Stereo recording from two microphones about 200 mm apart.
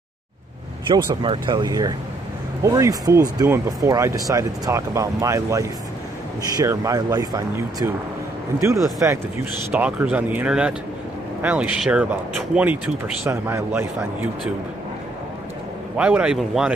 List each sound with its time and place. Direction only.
0.8 s speech: 25° right (ahead or behind)
9.7 s speech: 10° right (ahead or behind)
16.0 s speech: 5° right (ahead or behind)